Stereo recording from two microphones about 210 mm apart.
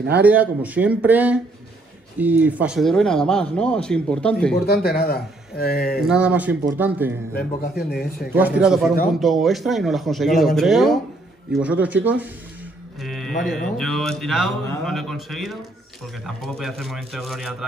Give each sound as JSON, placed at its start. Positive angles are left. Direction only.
{"t": 0.1, "sound": "speech", "side_deg": -10}
{"t": 4.8, "sound": "speech", "side_deg": 45}
{"t": 6.0, "sound": "speech", "side_deg": -5}
{"t": 7.3, "sound": "speech", "side_deg": 45}
{"t": 8.3, "sound": "speech", "side_deg": -5}
{"t": 13.0, "sound": "a sound", "side_deg": 0}
{"t": 13.4, "sound": "speech", "side_deg": 0}